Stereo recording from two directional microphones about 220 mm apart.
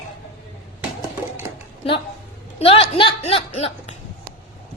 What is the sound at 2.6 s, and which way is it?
Speech, 25° left (ahead or behind).